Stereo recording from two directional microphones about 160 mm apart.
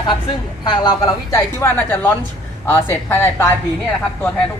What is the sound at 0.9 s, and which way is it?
Speech, 15° left (ahead or behind).